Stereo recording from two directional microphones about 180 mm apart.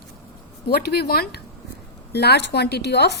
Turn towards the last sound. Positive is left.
turn(degrees=65)  # may be behind; listen again after turning